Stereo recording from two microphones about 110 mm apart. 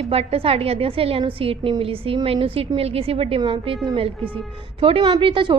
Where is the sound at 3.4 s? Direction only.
50° right (ahead or behind).